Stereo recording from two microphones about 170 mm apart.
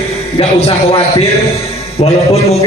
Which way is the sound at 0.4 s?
35° left (ahead or behind).